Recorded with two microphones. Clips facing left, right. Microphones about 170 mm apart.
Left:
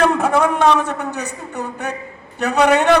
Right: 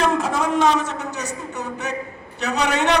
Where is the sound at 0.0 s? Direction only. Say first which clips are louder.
Left 5 dB; 60° left (ahead or behind).